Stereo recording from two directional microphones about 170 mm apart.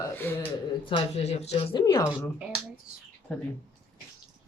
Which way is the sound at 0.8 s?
35° left (ahead or behind).